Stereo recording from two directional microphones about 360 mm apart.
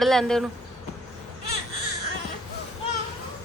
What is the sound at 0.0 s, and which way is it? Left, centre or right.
Speech, centre.